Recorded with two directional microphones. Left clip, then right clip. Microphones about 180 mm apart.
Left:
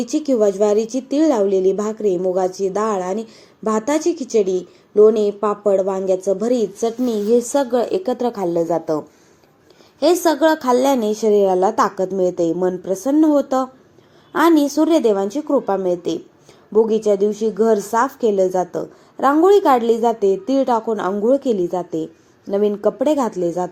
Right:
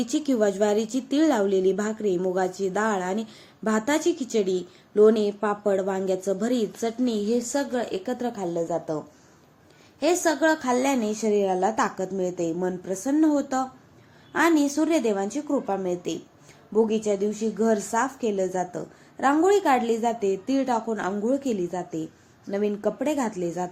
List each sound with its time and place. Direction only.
0.0 s a woman's voice: centre (ahead or behind)
6.8 s speech: 15° left (ahead or behind)
7.5 s a woman's voice: 30° left (ahead or behind)
10.0 s a woman's voice: 30° left (ahead or behind)